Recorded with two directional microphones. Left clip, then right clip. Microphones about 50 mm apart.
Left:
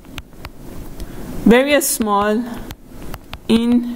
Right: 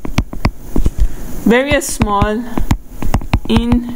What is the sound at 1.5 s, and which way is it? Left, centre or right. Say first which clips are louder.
Speech: even; left.